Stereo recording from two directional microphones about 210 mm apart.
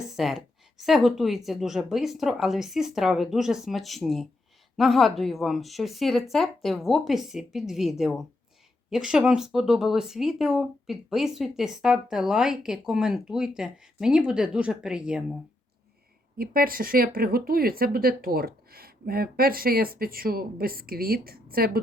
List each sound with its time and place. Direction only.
0.2 s speech: centre (ahead or behind)
16.4 s speech: 45° right (ahead or behind)